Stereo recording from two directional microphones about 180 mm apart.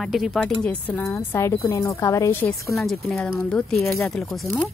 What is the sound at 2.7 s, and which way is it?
Speech, centre (ahead or behind).